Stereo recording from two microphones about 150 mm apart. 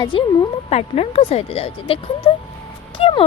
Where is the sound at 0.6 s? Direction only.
45° left (ahead or behind).